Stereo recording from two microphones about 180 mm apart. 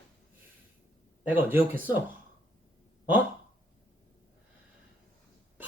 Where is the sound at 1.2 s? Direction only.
10° right (ahead or behind).